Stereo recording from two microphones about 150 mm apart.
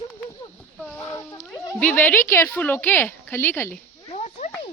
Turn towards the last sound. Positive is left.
turn(degrees=50)  # may be behind; listen again after turning